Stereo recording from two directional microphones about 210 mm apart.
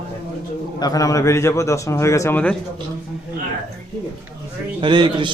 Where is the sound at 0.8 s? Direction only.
15° left (ahead or behind).